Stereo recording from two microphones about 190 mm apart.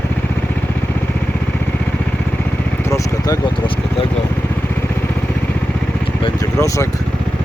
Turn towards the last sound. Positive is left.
turn(degrees=15)  # may be behind; listen again after turning